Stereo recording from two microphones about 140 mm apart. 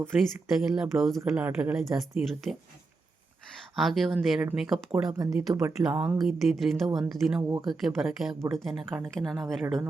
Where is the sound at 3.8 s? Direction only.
Centre (ahead or behind).